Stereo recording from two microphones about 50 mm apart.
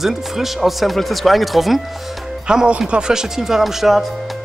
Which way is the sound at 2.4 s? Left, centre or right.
Centre.